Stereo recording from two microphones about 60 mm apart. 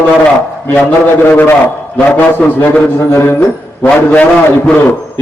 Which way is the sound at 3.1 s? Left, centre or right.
Left.